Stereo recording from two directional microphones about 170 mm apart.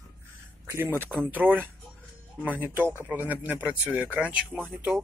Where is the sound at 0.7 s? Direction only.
10° right (ahead or behind).